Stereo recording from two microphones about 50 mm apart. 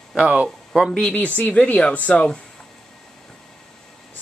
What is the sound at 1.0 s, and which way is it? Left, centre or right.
Speech, left.